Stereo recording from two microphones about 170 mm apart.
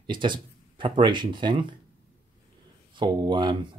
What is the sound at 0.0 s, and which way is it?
Speech, 30° right (ahead or behind).